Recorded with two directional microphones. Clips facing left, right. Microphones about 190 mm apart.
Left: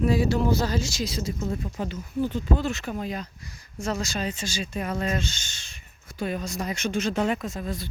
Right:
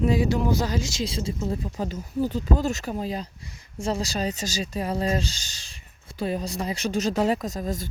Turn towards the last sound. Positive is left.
turn(degrees=-40)  # may be behind; listen again after turning